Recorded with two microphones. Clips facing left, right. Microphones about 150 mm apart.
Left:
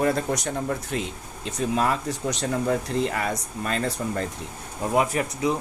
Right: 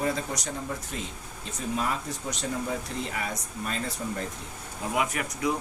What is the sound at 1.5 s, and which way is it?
Speech, 80° left.